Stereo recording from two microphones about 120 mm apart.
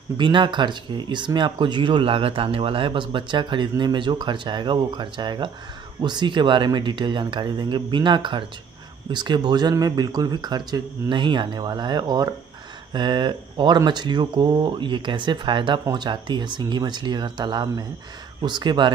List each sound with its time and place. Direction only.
0.2 s speech: 40° right (ahead or behind)